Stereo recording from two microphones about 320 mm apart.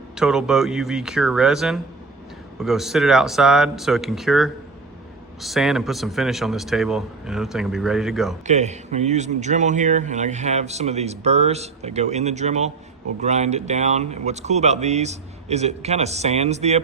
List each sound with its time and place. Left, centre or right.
0.2 s a man's voice: centre
8.4 s speech: right